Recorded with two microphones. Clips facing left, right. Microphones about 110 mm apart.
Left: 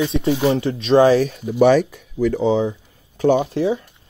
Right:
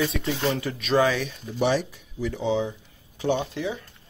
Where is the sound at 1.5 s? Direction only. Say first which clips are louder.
Left 10 dB; 55° left (ahead or behind).